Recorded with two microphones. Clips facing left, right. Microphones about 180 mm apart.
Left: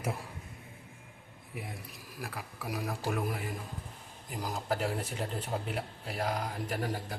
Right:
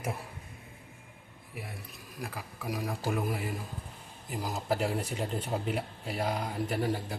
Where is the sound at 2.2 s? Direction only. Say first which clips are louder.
Right 2 dB; centre (ahead or behind).